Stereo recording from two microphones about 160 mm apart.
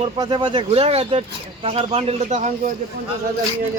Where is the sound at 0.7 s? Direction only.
40° right (ahead or behind).